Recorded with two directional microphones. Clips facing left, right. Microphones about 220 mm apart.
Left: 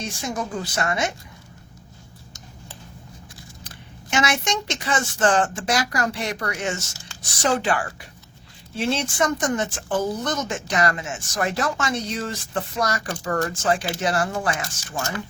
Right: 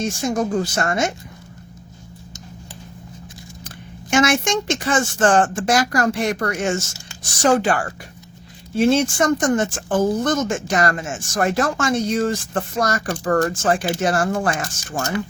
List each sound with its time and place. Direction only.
0.0 s speech: 45° right (ahead or behind)
4.1 s speech: 50° right (ahead or behind)